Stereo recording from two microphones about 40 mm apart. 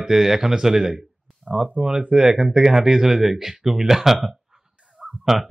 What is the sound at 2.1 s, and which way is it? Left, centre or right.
Speech, centre.